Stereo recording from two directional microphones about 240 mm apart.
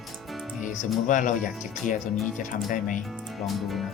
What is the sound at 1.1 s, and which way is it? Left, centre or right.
Speech, left.